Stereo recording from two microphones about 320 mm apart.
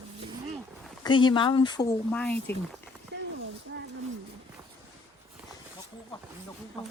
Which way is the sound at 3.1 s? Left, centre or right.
Right.